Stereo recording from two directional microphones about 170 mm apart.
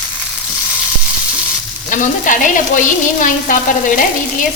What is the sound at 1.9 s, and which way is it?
Stir, 50° left (ahead or behind).